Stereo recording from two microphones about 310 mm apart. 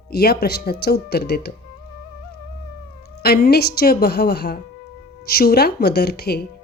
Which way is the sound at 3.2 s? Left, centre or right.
Left.